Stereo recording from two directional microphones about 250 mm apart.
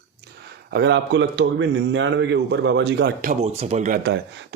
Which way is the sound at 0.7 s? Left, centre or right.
Right.